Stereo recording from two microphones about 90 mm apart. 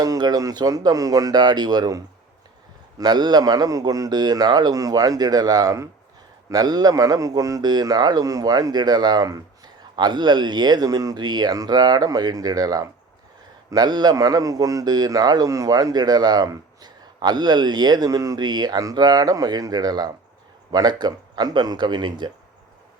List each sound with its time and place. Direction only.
0.0 s a man's voice: 45° right (ahead or behind)
9.9 s a man's voice: 55° right (ahead or behind)